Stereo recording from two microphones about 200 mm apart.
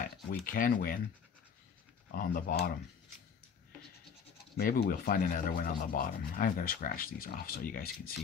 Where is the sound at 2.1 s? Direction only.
45° left (ahead or behind).